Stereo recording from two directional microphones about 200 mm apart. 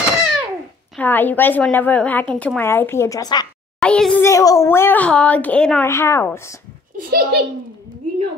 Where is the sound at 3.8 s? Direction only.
5° left (ahead or behind).